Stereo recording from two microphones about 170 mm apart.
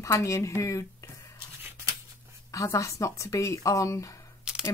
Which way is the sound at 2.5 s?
20° left (ahead or behind).